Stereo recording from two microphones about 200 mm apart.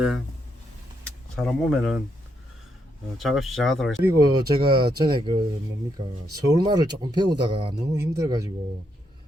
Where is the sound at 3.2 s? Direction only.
Centre (ahead or behind).